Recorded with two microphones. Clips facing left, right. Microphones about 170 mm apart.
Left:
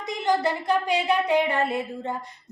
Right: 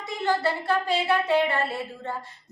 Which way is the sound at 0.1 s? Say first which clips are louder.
Left 2 dB; 15° left (ahead or behind).